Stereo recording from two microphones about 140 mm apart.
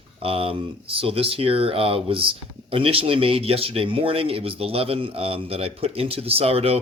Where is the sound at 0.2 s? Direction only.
45° right (ahead or behind).